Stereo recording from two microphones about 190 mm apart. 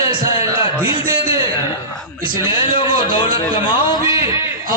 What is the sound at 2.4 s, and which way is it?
Speech, 25° left (ahead or behind).